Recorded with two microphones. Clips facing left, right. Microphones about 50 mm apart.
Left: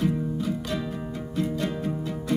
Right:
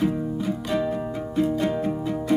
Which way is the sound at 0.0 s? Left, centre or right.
Centre.